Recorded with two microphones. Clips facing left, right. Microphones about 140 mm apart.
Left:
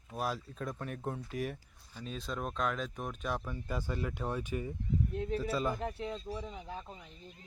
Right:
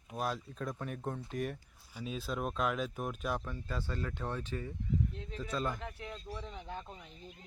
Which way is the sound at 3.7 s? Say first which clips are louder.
Left 2 dB; 15° left (ahead or behind).